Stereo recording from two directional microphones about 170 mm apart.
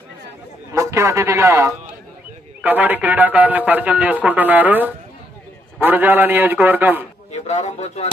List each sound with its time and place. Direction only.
0.7 s a man's voice: 15° right (ahead or behind)
7.3 s a man's voice: 40° left (ahead or behind)